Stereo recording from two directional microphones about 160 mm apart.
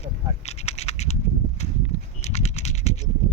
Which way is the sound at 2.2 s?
45° left (ahead or behind).